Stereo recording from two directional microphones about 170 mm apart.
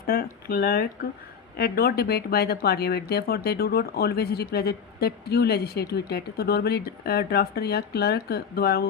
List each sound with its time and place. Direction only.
0.0 s speech: 60° left (ahead or behind)